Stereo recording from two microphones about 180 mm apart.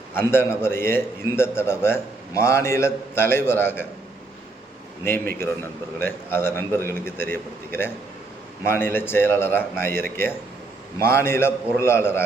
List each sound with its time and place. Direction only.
0.2 s a man's voice: 15° left (ahead or behind)
5.0 s a man's voice: 10° left (ahead or behind)
11.0 s a man's voice: 15° left (ahead or behind)